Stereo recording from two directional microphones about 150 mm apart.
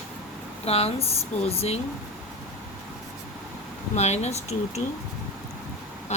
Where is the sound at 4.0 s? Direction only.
45° left (ahead or behind).